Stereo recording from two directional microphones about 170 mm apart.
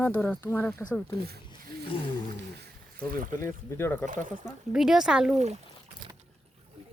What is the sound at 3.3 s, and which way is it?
Speech, 15° left (ahead or behind).